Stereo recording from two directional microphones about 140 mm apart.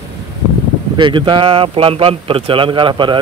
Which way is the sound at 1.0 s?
35° right (ahead or behind).